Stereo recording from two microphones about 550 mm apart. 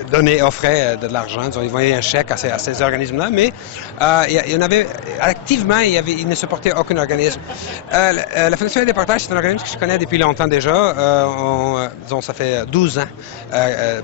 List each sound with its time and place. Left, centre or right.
0.1 s a man's voice: left